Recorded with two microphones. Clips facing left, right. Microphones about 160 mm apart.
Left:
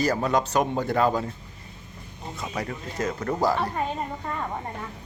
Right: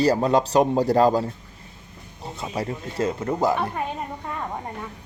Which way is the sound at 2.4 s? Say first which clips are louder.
Right 3 dB; 25° right (ahead or behind).